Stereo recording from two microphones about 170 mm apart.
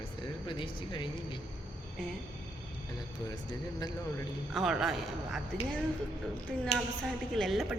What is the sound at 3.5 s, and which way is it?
Speech, 25° left (ahead or behind).